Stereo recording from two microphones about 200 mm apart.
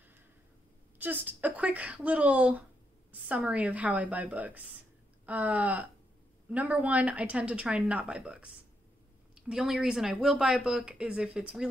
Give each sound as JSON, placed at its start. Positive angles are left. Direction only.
{"t": 0.9, "sound": "speech", "side_deg": -10}